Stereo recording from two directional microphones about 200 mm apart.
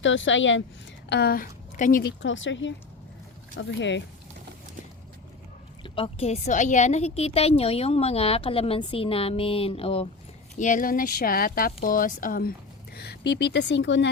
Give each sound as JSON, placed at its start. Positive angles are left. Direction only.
{"t": 0.0, "sound": "speech", "side_deg": 70}
{"t": 1.1, "sound": "speech", "side_deg": 50}
{"t": 2.2, "sound": "speech", "side_deg": 70}
{"t": 5.8, "sound": "a woman's voice", "side_deg": 30}
{"t": 10.6, "sound": "speech", "side_deg": 40}